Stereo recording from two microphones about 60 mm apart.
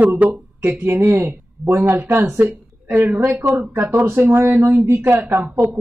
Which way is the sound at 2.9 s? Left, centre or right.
Right.